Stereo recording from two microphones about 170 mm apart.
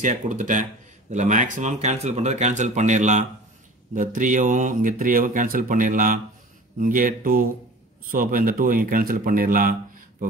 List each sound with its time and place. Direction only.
0.0 s speech: 50° right (ahead or behind)